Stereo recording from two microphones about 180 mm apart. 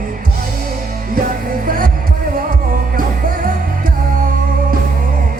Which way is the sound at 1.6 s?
50° right (ahead or behind).